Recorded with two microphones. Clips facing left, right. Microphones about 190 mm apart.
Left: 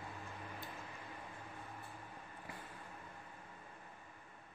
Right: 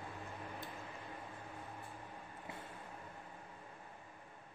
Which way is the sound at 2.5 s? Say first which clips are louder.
Right 2 dB; 25° right (ahead or behind).